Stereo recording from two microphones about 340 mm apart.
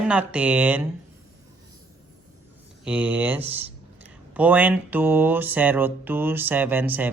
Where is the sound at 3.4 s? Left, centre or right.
Centre.